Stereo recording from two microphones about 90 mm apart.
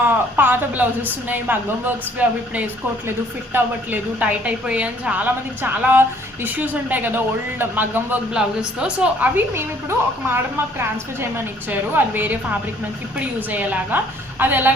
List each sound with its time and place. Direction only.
0.1 s a woman's voice: 20° right (ahead or behind)
8.3 s a woman's voice: 10° right (ahead or behind)